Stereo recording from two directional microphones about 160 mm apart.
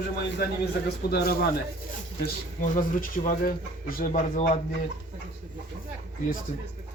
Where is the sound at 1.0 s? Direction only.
75° left (ahead or behind).